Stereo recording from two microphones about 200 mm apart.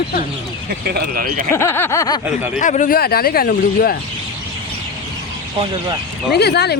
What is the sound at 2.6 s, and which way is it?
Speech, 40° left (ahead or behind).